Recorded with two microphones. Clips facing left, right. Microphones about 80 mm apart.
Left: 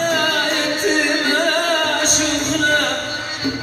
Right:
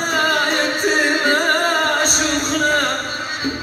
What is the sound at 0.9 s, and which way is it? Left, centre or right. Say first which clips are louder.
Music: right 1 dB; right.